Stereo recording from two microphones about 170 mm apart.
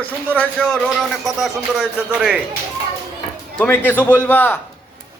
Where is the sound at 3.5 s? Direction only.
10° left (ahead or behind).